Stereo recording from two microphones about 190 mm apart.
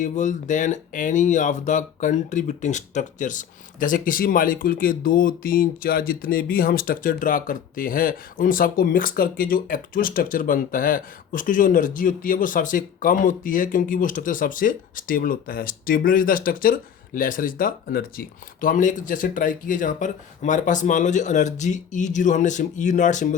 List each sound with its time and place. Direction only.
0.0 s speech: 40° left (ahead or behind)